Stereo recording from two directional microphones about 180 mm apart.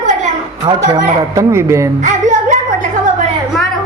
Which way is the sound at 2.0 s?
45° right (ahead or behind).